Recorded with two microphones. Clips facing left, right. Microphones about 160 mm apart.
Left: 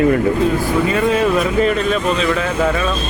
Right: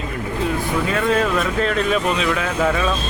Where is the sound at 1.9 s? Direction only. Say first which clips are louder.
Left 2 dB; 5° right (ahead or behind).